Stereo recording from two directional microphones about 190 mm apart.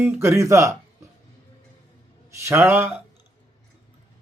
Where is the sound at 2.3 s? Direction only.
15° right (ahead or behind).